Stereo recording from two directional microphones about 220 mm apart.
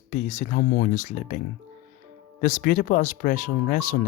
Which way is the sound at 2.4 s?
35° left (ahead or behind).